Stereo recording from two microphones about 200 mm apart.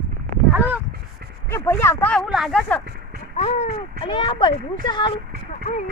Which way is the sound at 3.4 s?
35° left (ahead or behind).